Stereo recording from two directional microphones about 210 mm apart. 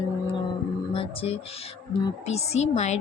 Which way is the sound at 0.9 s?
25° left (ahead or behind).